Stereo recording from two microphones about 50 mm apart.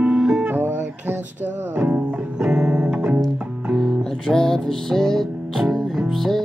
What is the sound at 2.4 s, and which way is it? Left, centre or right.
Music, right.